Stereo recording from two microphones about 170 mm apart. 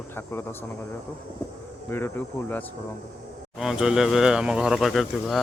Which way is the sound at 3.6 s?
Centre (ahead or behind).